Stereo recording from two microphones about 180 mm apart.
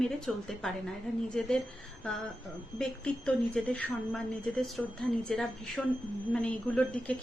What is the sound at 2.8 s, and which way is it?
A woman's voice, 5° left (ahead or behind).